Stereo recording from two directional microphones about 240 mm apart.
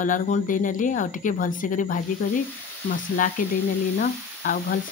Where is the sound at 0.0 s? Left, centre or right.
Left.